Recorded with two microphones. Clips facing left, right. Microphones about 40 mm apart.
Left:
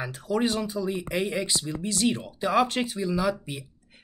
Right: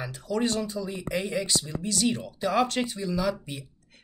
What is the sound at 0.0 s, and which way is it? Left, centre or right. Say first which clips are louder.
Speech: left 2 dB; centre.